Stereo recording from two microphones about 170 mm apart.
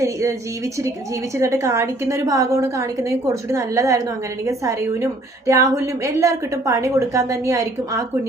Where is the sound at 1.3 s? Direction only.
15° right (ahead or behind).